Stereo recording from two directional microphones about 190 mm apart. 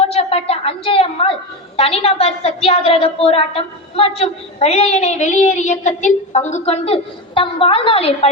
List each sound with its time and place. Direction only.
0.0 s a woman's voice: 30° left (ahead or behind)